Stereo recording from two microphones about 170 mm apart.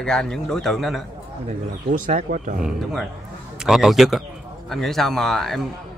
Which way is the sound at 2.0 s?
50° right (ahead or behind).